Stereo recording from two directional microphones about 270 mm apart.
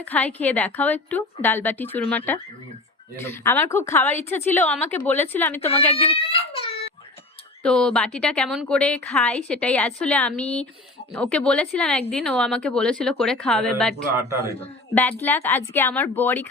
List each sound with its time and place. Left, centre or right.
0.0 s a woman's voice: centre
6.1 s a sound: left
7.6 s a woman's voice: centre
15.2 s a woman's voice: centre